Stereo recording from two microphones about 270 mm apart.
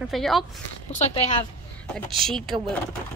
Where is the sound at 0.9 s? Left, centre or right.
Left.